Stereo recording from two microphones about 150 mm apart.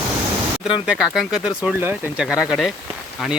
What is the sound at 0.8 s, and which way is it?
Speech, 5° right (ahead or behind).